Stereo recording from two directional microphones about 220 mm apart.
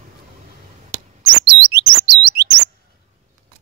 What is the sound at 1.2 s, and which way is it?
Chirp, 50° right (ahead or behind).